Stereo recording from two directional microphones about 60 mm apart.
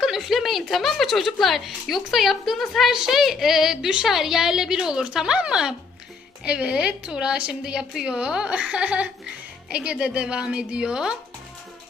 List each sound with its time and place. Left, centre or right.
0.0 s a woman's voice: centre